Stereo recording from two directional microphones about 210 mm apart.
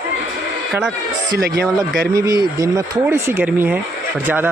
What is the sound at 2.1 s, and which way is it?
Speech, 15° right (ahead or behind).